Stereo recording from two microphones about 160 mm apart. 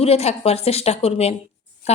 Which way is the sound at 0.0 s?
40° left (ahead or behind).